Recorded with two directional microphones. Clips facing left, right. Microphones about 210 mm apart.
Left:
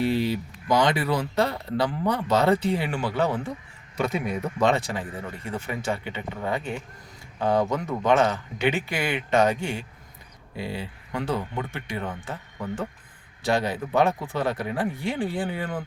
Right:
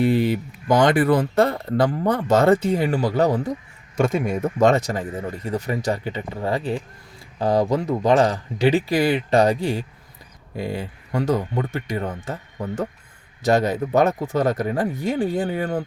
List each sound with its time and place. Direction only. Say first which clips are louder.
0.0 s speech: right 5 dB; 50° right (ahead or behind)